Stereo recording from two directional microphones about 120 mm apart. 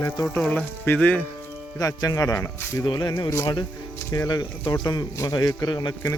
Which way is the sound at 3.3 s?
25° left (ahead or behind).